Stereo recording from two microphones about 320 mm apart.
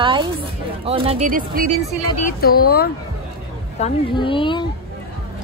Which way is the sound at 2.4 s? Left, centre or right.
Left.